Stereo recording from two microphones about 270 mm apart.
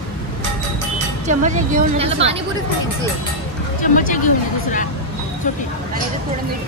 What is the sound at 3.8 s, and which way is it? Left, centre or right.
Speech, left.